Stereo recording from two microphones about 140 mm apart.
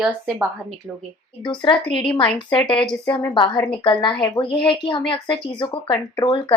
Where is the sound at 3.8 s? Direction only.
30° left (ahead or behind).